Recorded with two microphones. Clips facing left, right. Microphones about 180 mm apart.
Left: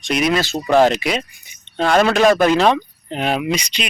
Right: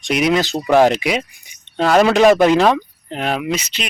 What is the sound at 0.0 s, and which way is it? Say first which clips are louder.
Speech: right 2 dB; 15° right (ahead or behind).